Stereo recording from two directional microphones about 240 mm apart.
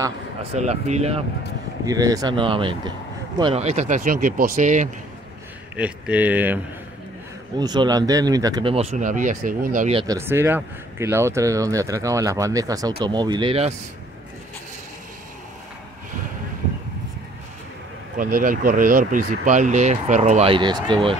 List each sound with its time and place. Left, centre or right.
0.0 s speech: right
1.9 s speech: centre; by 4.8 s right
5.8 s speech: centre
7.5 s speech: centre; by 9.9 s right
9.9 s speech: centre
18.1 s speech: right